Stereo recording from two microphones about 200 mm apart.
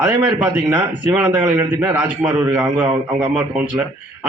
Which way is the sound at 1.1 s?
10° right (ahead or behind).